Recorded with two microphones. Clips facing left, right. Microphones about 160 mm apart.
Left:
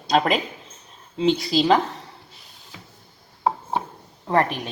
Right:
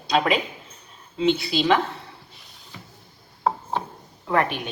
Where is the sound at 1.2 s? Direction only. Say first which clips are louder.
Left 2 dB; 35° left (ahead or behind).